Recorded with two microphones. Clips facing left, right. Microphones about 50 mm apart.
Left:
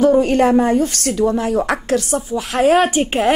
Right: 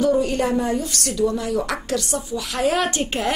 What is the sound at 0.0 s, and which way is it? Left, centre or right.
A woman's voice, left.